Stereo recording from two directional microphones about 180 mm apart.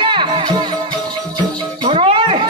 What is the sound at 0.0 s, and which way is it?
Music, 25° right (ahead or behind).